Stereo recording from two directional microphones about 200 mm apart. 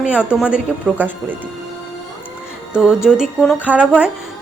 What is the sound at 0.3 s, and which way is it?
Speech, 5° right (ahead or behind).